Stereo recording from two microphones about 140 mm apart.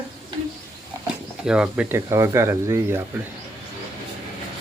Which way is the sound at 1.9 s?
20° right (ahead or behind).